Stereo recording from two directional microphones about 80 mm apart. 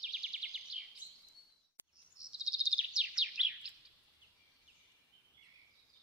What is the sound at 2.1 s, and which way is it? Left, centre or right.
Bird vocalization, centre.